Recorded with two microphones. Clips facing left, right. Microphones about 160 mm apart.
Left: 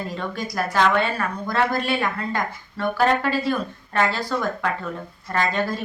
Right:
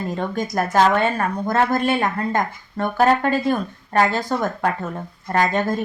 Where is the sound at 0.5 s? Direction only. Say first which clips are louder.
Right 3 dB; 45° right (ahead or behind).